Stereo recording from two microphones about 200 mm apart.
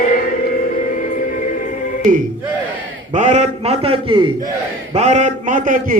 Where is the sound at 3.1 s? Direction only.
35° right (ahead or behind).